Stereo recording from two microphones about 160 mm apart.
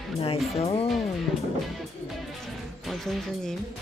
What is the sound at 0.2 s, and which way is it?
Speech, 40° left (ahead or behind).